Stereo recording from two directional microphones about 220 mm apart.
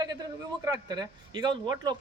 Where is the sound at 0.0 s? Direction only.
15° right (ahead or behind).